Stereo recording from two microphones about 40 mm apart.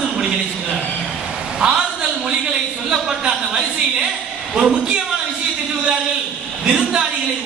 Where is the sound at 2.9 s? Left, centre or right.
Centre.